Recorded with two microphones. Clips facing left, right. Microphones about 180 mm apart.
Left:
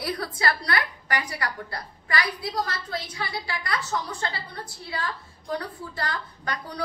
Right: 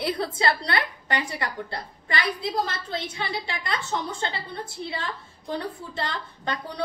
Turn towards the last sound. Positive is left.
turn(degrees=-25)  # may be behind; listen again after turning